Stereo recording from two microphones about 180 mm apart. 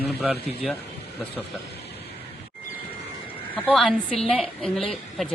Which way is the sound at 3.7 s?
Centre (ahead or behind).